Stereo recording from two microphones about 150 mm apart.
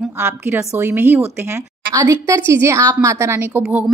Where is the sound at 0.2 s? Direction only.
15° right (ahead or behind).